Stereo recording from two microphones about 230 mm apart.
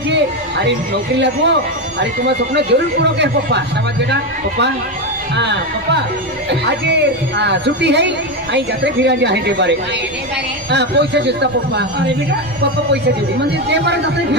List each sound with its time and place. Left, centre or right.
1.2 s a man's voice: right
13.7 s a man's voice: right